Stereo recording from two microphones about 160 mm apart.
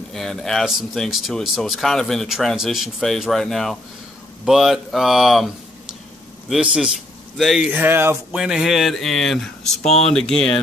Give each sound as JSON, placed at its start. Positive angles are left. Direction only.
{"t": 0.1, "sound": "speech", "side_deg": 0}
{"t": 6.5, "sound": "speech", "side_deg": -5}
{"t": 7.7, "sound": "speech", "side_deg": -15}
{"t": 8.3, "sound": "speech", "side_deg": -5}
{"t": 9.8, "sound": "speech", "side_deg": 45}
{"t": 10.1, "sound": "speech", "side_deg": 5}